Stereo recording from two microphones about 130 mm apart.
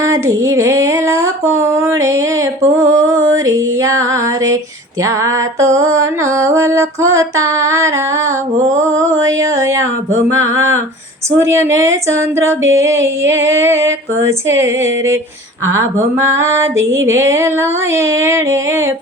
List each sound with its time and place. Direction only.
0.0 s female singing: 25° right (ahead or behind)
9.0 s female singing: 25° right (ahead or behind)
16.2 s female singing: 20° right (ahead or behind)